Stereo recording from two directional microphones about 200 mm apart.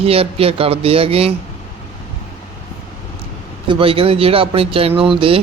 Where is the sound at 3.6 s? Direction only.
25° right (ahead or behind).